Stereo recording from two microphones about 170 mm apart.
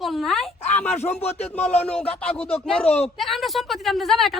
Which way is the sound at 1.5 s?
10° left (ahead or behind).